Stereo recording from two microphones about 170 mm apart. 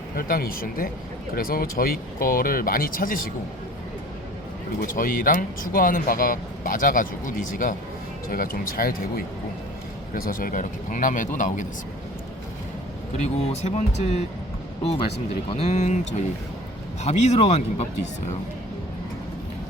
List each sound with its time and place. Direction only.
0.2 s speech: 60° left (ahead or behind)
4.8 s speech: 55° left (ahead or behind)
13.1 s speech: 40° left (ahead or behind)
15.4 s speech: 40° left (ahead or behind)
17.0 s speech: 40° left (ahead or behind)